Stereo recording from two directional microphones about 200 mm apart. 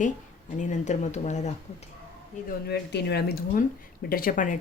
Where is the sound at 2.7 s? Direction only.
55° left (ahead or behind).